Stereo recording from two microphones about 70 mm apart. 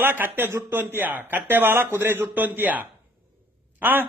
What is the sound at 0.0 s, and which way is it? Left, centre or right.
A man's voice, right.